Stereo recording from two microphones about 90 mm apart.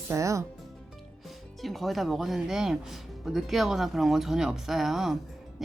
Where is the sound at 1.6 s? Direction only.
Centre (ahead or behind).